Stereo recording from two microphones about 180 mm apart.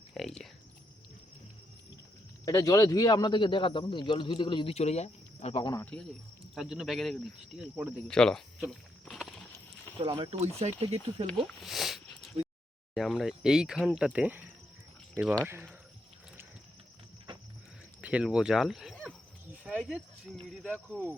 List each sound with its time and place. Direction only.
0.1 s speech: centre (ahead or behind)
2.4 s a man's voice: 20° left (ahead or behind)
5.8 s speech: 5° left (ahead or behind)
9.0 s a sound: centre (ahead or behind)
10.0 s speech: 25° right (ahead or behind)
11.4 s speech: centre (ahead or behind)
18.0 s speech: 5° right (ahead or behind)
19.7 s cricket: 5° right (ahead or behind)
20.5 s speech: centre (ahead or behind)